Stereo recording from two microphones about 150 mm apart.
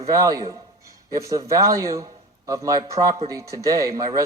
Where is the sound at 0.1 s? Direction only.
25° right (ahead or behind).